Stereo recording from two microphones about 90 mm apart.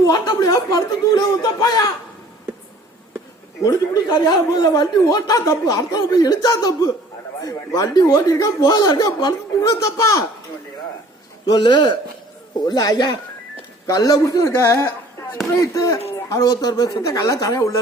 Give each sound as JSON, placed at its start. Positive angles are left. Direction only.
{"t": 0.0, "sound": "speech", "side_deg": 45}
{"t": 3.6, "sound": "speech", "side_deg": 45}
{"t": 11.4, "sound": "a man's voice", "side_deg": 55}
{"t": 12.6, "sound": "speech", "side_deg": 45}